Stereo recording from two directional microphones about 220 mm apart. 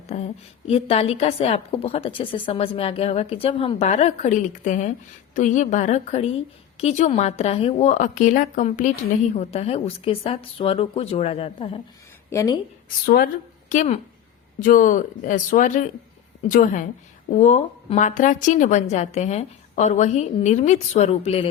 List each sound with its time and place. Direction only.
0.1 s a woman's voice: 30° left (ahead or behind)
12.3 s a woman's voice: 15° left (ahead or behind)
13.1 s a woman's voice: 40° left (ahead or behind); by 21.5 s 25° left (ahead or behind)